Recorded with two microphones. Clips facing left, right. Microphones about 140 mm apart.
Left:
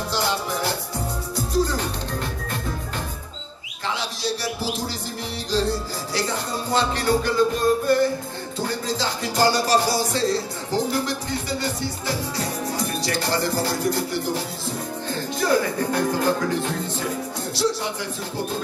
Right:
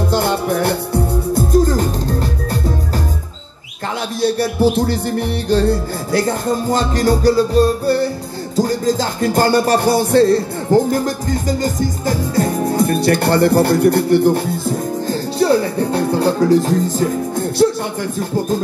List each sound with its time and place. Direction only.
0.1 s music: 55° right (ahead or behind)
4.2 s music: 55° right (ahead or behind)
15.0 s speech: 30° right (ahead or behind); by 17.6 s 45° right (ahead or behind)